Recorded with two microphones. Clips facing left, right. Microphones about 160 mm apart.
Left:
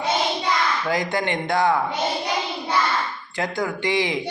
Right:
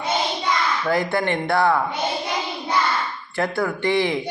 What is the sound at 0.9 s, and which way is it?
Speech, 20° left (ahead or behind).